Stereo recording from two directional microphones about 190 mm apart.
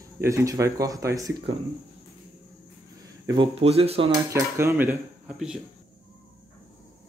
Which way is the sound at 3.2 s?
30° right (ahead or behind).